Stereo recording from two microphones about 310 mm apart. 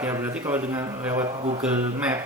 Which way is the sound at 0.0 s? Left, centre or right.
Centre.